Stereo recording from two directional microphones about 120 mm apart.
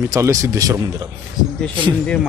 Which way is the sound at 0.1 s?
25° right (ahead or behind).